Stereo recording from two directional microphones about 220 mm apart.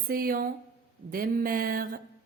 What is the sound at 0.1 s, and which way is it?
Speech, 40° right (ahead or behind).